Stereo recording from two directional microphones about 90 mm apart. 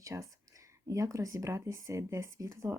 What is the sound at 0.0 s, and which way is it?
Speech, 35° right (ahead or behind).